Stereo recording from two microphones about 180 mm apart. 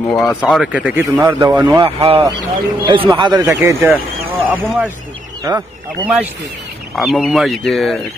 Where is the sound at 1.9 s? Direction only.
30° right (ahead or behind).